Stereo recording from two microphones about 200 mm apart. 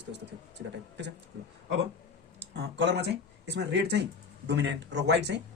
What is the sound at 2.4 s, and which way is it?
Speech, 60° right (ahead or behind).